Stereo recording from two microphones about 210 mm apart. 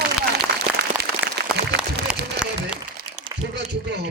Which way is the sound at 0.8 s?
50° right (ahead or behind).